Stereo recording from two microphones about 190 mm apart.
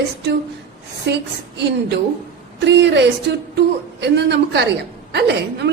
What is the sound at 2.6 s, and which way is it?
A woman's voice, 65° right (ahead or behind).